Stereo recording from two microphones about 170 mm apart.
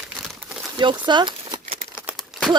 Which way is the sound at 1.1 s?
25° right (ahead or behind).